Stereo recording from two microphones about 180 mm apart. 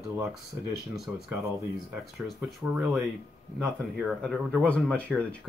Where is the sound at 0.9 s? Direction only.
Centre (ahead or behind).